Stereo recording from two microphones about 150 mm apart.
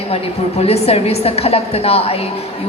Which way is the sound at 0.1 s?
45° left (ahead or behind).